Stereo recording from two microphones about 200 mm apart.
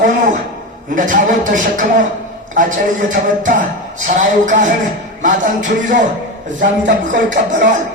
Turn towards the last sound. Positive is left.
turn(degrees=-65)  # may be behind; listen again after turning